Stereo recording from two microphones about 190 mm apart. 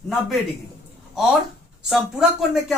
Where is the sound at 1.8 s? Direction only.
5° right (ahead or behind).